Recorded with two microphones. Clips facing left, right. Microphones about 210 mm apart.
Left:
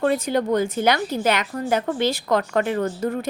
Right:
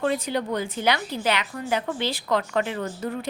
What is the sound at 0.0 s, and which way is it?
A woman's voice, 50° left (ahead or behind).